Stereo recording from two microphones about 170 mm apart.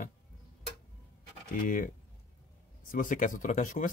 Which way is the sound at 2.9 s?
50° left (ahead or behind).